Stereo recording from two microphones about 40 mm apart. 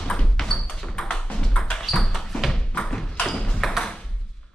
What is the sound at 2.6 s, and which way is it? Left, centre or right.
Thump, left.